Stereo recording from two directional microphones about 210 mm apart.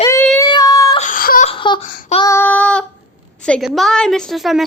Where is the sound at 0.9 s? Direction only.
40° left (ahead or behind).